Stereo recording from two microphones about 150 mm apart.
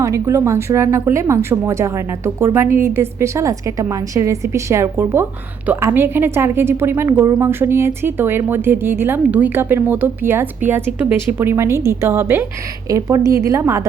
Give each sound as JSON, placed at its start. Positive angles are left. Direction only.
{"t": 0.0, "sound": "a woman's voice", "side_deg": -20}